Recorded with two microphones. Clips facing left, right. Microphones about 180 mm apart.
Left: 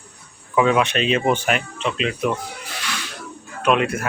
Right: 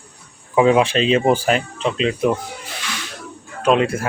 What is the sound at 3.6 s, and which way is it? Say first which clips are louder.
Speech: right 3 dB; 30° right (ahead or behind).